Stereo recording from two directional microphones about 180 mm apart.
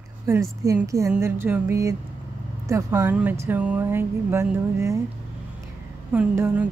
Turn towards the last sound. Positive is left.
turn(degrees=-5)  # may be behind; listen again after turning